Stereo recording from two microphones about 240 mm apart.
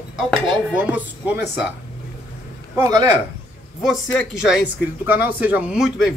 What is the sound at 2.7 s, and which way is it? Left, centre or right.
Speech, centre.